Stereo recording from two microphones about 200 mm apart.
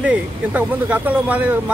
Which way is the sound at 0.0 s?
10° right (ahead or behind).